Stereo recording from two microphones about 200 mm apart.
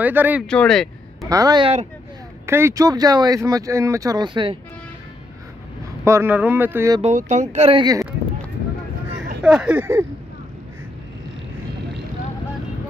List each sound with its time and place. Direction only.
0.0 s speech: 10° right (ahead or behind)
0.5 s a sound: 5° left (ahead or behind)
1.3 s speech: 20° right (ahead or behind)
2.4 s speech: 15° right (ahead or behind)
6.0 s speech: 10° right (ahead or behind)
7.0 s speech: 35° right (ahead or behind); by 8.1 s 20° right (ahead or behind)
9.4 s speech: 5° right (ahead or behind)